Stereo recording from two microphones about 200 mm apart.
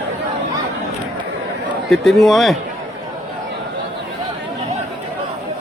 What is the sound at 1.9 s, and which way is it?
Speech, centre (ahead or behind).